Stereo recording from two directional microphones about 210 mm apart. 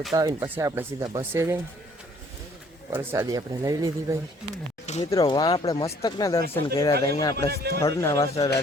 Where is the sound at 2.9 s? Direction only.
10° right (ahead or behind).